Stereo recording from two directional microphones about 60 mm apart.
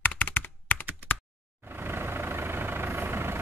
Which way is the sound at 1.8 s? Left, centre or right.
Right.